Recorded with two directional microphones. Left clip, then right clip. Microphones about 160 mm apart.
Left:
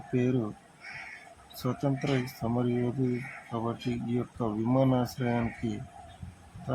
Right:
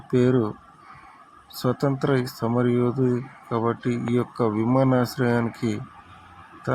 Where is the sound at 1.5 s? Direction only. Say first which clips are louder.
Right 8 dB; 25° right (ahead or behind).